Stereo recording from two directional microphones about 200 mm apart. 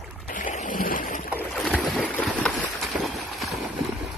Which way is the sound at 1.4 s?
Centre (ahead or behind).